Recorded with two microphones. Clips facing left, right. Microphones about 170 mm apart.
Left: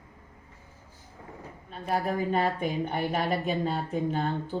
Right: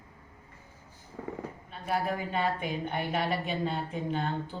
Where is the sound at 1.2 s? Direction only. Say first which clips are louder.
Right 9 dB; 90° right.